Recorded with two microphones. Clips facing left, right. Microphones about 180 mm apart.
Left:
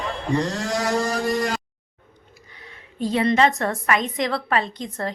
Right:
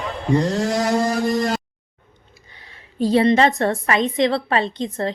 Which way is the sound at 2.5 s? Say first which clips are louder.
Right 6 dB; 30° right (ahead or behind).